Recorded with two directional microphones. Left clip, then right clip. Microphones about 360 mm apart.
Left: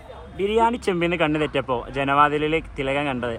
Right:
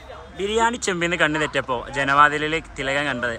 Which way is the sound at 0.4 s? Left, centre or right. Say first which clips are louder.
Left 1 dB; centre.